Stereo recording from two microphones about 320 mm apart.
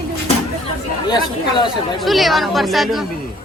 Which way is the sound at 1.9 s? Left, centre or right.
Centre.